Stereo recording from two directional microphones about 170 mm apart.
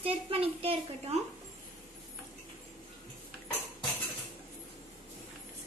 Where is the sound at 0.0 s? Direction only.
35° right (ahead or behind).